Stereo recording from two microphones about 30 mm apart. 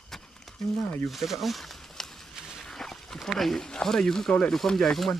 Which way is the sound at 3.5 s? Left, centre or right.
Centre.